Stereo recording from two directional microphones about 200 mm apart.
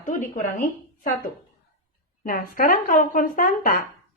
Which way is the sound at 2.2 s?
45° left (ahead or behind).